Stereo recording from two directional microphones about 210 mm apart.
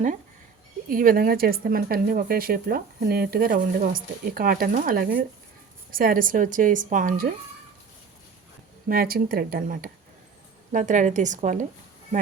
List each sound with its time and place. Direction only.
0.9 s a woman's voice: 40° right (ahead or behind)
8.9 s a woman's voice: 45° right (ahead or behind)